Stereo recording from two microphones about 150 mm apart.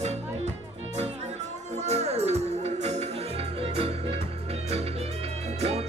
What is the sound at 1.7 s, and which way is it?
Music, 45° right (ahead or behind).